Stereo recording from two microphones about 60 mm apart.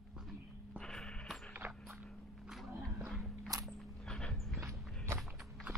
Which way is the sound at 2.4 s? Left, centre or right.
Centre.